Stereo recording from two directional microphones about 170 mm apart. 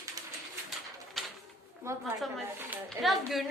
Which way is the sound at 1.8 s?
15° right (ahead or behind).